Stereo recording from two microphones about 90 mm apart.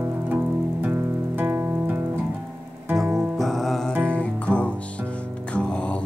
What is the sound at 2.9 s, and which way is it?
Music, centre (ahead or behind).